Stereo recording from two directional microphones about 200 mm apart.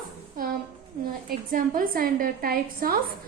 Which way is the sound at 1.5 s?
45° right (ahead or behind).